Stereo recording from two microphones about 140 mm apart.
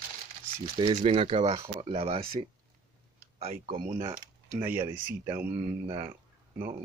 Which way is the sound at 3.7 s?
70° right (ahead or behind).